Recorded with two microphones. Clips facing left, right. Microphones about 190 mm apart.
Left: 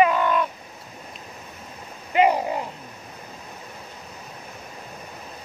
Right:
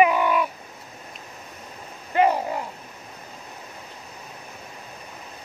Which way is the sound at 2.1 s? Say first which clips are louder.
Left 1 dB; 15° left (ahead or behind).